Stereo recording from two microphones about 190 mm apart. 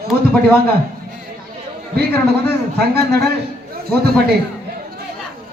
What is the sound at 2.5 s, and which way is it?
A man's voice, 60° right (ahead or behind).